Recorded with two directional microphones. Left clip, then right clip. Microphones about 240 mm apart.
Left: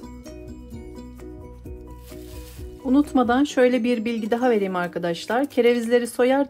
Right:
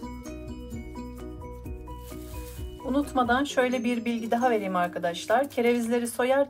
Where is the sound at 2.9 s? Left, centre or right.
Left.